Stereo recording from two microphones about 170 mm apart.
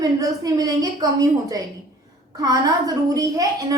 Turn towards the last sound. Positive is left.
turn(degrees=-20)  # may be behind; listen again after turning